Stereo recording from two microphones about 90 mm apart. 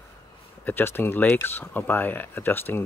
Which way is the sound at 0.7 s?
25° left (ahead or behind).